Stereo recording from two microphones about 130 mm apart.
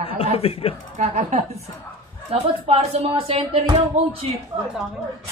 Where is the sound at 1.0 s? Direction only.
60° right (ahead or behind).